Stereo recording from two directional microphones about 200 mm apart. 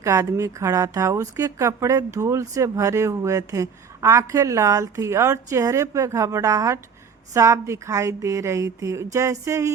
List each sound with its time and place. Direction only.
0.0 s a woman's voice: 15° right (ahead or behind)